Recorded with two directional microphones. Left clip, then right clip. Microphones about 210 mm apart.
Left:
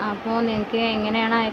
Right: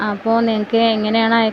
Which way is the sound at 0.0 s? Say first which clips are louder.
Right 7 dB; 25° right (ahead or behind).